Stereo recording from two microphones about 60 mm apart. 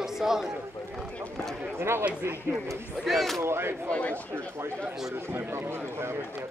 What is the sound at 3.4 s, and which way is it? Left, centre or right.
Speech, right.